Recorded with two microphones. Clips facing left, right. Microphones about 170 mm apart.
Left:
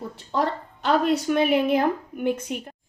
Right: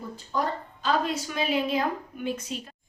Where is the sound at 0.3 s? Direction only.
65° left (ahead or behind).